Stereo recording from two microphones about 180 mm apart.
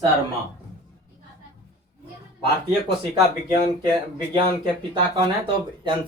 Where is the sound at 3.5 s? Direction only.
30° right (ahead or behind).